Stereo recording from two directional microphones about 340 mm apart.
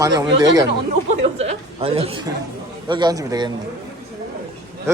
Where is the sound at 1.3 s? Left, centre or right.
Centre.